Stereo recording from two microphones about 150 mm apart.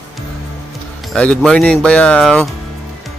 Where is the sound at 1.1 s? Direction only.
5° left (ahead or behind).